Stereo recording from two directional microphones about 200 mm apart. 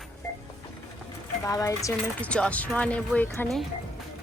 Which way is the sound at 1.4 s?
15° left (ahead or behind).